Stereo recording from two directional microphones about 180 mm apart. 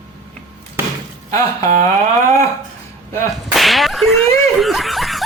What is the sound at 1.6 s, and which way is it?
Speech, 45° right (ahead or behind).